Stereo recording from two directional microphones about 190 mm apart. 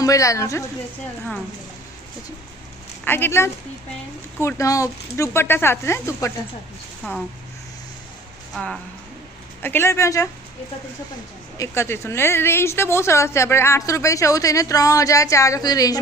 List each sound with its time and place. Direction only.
0.0 s a woman's voice: 15° left (ahead or behind)
3.0 s a woman's voice: 10° left (ahead or behind)
8.5 s a woman's voice: centre (ahead or behind)
11.5 s a woman's voice: 15° left (ahead or behind)